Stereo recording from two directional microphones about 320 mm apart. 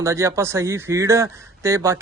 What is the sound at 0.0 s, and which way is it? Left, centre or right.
A man's voice, centre.